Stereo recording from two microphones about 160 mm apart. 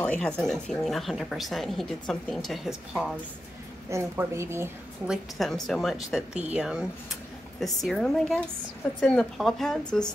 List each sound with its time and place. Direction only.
0.0 s speech: 5° left (ahead or behind)
3.9 s a woman's voice: 15° right (ahead or behind)
5.0 s speech: centre (ahead or behind)